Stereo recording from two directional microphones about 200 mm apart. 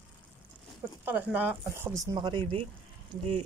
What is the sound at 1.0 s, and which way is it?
Speech, 10° right (ahead or behind).